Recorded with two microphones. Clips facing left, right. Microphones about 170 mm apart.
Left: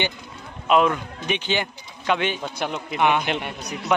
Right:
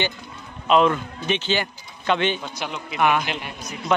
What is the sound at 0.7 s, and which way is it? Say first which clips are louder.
A man's voice: right 1 dB; 10° left (ahead or behind).